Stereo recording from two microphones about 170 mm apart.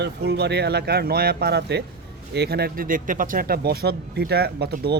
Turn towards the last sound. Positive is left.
turn(degrees=-70)  # may be behind; listen again after turning